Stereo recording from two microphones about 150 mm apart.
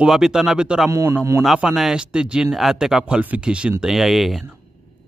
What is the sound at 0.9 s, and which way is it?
Speech, 20° right (ahead or behind).